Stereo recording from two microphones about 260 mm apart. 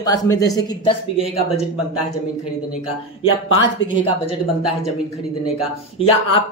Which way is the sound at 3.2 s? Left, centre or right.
Left.